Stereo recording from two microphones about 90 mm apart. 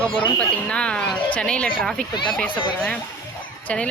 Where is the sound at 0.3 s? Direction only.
10° left (ahead or behind).